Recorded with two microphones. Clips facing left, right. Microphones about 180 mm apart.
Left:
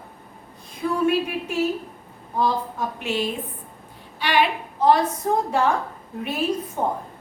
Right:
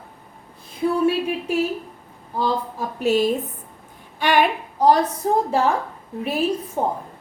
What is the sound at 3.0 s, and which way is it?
Speech, 40° right (ahead or behind).